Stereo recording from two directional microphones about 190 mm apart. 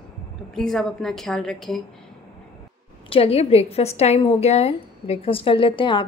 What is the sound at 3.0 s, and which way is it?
A woman's voice, 30° left (ahead or behind).